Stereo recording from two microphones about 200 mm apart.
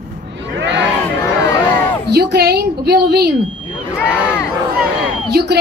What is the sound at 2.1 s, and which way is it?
A woman's voice, 55° right (ahead or behind).